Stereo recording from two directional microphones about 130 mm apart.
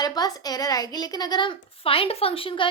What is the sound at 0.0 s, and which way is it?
A woman's voice, 30° left (ahead or behind).